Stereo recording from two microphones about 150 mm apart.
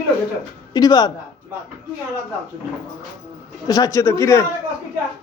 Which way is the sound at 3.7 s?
20° left (ahead or behind).